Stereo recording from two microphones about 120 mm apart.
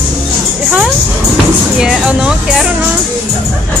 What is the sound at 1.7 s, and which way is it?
Speech, 5° right (ahead or behind).